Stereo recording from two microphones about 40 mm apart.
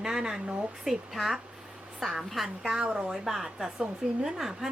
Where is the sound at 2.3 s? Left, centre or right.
Centre.